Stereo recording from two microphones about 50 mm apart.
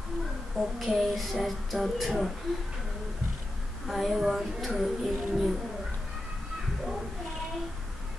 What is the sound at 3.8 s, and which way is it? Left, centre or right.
A woman's voice, centre.